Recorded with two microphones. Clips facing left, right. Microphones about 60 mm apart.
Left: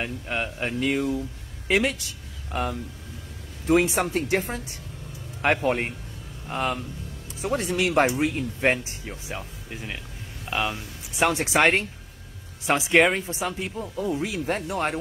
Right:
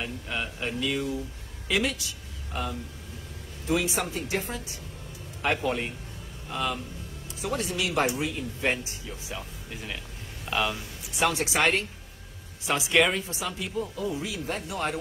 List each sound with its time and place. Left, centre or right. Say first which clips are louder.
0.0 s speech: left 4 dB; left
9.7 s speech: left 2 dB; centre
11.1 s speech: left 4 dB; left